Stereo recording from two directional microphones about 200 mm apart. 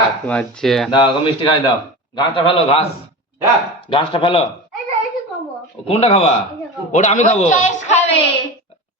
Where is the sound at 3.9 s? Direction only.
25° left (ahead or behind).